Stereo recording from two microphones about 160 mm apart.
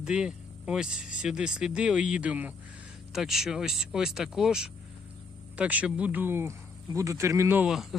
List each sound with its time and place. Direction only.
0.0 s speech: 5° right (ahead or behind)
7.7 s speech: centre (ahead or behind)